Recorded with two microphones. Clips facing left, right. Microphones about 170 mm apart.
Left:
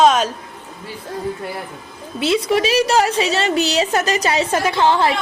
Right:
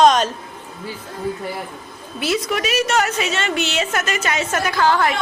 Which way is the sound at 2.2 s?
30° left (ahead or behind).